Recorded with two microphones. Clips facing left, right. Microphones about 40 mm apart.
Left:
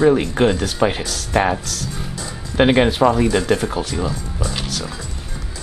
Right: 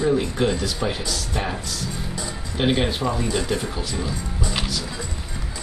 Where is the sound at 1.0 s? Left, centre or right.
Left.